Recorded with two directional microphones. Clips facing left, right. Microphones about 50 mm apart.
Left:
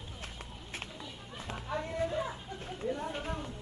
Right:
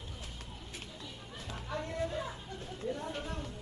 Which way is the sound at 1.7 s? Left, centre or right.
Centre.